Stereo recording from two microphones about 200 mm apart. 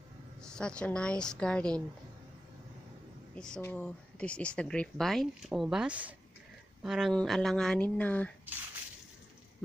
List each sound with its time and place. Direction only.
0.4 s speech: 5° left (ahead or behind)
3.3 s speech: 5° left (ahead or behind)